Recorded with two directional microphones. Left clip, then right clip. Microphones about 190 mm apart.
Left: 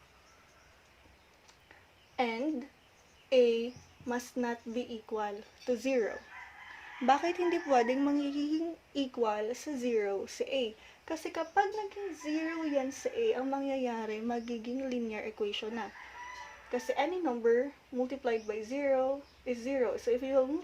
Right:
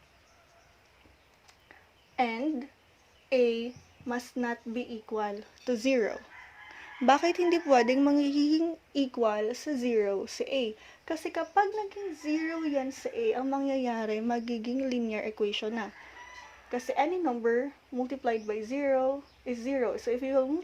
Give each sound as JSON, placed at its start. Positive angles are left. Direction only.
{"t": 2.1, "sound": "a woman's voice", "side_deg": -40}